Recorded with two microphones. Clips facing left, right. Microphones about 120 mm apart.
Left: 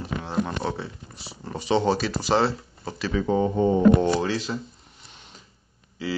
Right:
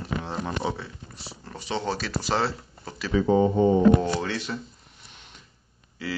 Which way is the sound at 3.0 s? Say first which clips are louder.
Right 2 dB; 10° right (ahead or behind).